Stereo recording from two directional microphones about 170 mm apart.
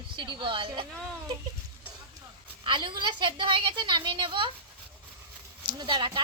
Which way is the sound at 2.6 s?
30° right (ahead or behind).